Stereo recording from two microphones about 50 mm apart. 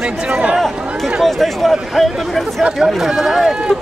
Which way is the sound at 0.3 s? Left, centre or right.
Right.